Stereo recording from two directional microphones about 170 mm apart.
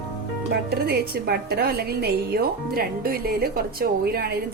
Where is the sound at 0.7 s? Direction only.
70° right (ahead or behind).